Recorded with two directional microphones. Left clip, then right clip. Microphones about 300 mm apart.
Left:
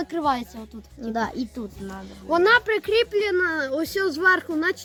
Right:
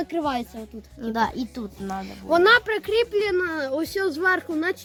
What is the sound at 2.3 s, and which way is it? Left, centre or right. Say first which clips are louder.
Speech: right 1 dB; centre.